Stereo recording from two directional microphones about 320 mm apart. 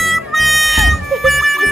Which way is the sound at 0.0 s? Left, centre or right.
Centre.